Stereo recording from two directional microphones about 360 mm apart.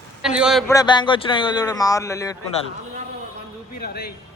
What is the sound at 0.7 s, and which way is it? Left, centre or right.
A man's voice, centre.